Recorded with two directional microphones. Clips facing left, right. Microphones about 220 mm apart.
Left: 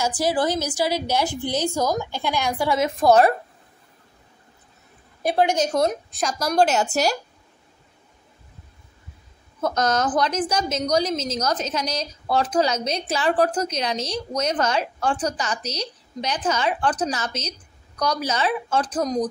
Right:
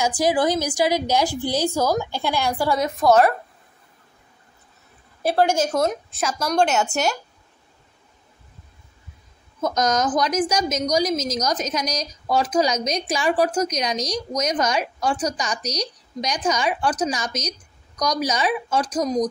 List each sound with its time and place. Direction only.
0.2 s a woman's voice: 15° right (ahead or behind)
2.8 s a woman's voice: 30° left (ahead or behind)
5.3 s a woman's voice: 20° left (ahead or behind)
5.7 s a woman's voice: 5° right (ahead or behind)
9.6 s a woman's voice: 10° right (ahead or behind)